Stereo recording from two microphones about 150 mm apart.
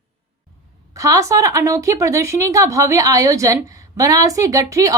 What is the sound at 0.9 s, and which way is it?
A woman's voice, 20° right (ahead or behind).